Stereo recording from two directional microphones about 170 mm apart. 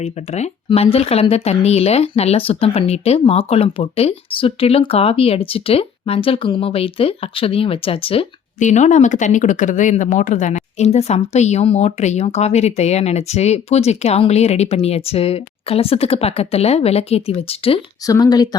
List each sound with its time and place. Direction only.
0.0 s speech: 40° left (ahead or behind)
8.5 s speech: 45° left (ahead or behind)
18.0 s speech: 20° left (ahead or behind)